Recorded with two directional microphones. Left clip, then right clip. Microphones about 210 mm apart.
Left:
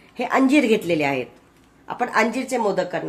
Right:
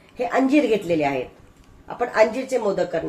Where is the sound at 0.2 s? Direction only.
55° left (ahead or behind).